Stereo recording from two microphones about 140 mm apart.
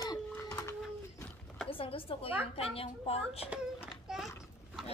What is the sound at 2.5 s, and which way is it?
Speech, 45° left (ahead or behind).